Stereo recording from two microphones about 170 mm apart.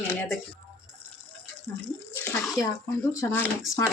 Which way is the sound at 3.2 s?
15° left (ahead or behind).